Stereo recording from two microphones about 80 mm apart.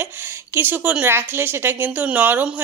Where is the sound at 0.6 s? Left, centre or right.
Right.